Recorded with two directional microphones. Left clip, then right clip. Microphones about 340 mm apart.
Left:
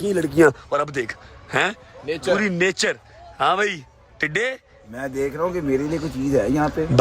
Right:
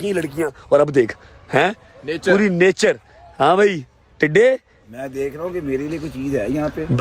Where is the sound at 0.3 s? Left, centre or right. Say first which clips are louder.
Left 8 dB; left.